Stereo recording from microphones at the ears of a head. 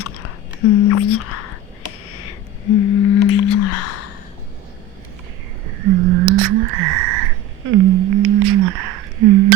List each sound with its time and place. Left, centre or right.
0.0 s whispering: left
5.6 s frog: right